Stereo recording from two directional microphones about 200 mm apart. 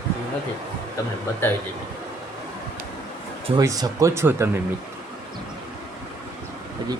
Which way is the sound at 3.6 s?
20° right (ahead or behind).